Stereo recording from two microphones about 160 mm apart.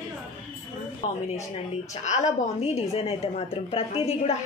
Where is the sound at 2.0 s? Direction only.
45° left (ahead or behind).